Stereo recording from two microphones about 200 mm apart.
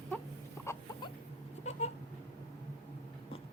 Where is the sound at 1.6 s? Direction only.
35° left (ahead or behind).